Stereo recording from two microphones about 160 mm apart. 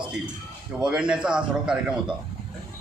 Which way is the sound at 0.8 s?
5° right (ahead or behind).